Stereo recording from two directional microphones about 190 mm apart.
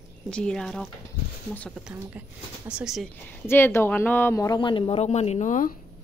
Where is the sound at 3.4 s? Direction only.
10° left (ahead or behind); by 5.7 s 40° left (ahead or behind).